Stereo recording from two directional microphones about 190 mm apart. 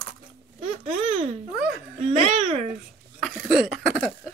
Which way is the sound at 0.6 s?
30° right (ahead or behind).